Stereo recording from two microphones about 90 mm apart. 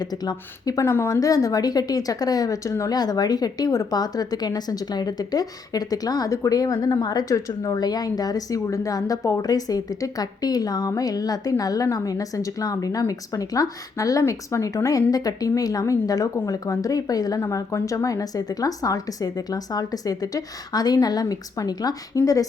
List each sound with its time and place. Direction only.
0.0 s a woman's voice: 50° left (ahead or behind)
0.9 s a woman's voice: 30° left (ahead or behind)
17.4 s a woman's voice: 30° left (ahead or behind)